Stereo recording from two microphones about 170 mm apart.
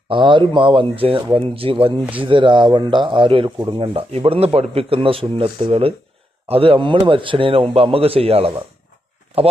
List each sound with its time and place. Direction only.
0.1 s speech: 30° right (ahead or behind)